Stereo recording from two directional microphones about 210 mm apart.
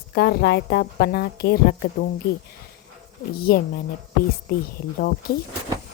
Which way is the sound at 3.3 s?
45° left (ahead or behind).